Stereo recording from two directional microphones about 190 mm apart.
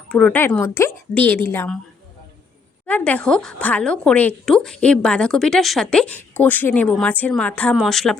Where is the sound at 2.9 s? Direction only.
5° left (ahead or behind).